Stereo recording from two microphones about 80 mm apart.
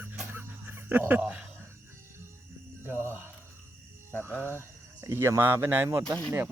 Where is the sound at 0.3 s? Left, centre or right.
Right.